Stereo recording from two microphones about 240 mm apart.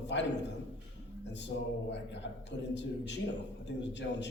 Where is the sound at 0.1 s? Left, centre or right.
Left.